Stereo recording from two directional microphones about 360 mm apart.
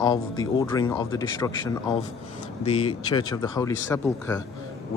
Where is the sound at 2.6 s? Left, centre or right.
Centre.